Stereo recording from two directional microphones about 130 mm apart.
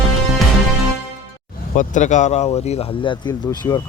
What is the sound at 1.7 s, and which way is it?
Speech, 75° left (ahead or behind).